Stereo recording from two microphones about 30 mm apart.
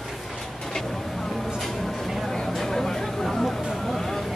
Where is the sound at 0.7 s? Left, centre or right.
Centre.